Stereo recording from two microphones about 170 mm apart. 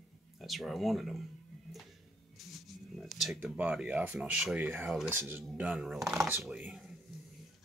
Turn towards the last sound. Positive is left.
turn(degrees=-5)  # may be behind; listen again after turning